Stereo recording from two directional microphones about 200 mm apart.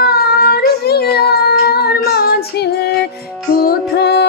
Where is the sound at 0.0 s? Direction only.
50° left (ahead or behind).